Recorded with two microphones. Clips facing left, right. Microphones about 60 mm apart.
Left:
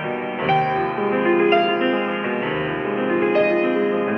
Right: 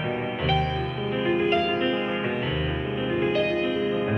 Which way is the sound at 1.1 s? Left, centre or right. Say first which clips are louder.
Left 6 dB; left.